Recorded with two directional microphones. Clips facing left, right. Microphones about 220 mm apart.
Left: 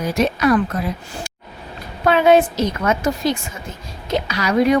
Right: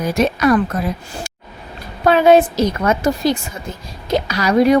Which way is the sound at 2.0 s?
40° right (ahead or behind).